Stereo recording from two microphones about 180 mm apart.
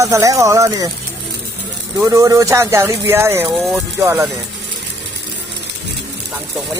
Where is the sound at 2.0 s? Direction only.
15° right (ahead or behind).